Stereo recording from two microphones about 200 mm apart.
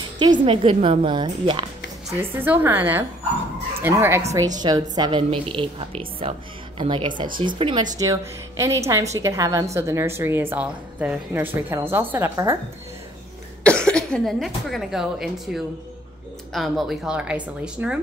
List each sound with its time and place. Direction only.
0.5 s a woman's voice: 25° right (ahead or behind)
2.0 s a woman's voice: 10° right (ahead or behind)
13.7 s speech: 5° left (ahead or behind)